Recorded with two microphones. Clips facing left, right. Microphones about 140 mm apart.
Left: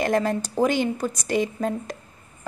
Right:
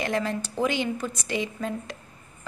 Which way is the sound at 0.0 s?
45° left (ahead or behind).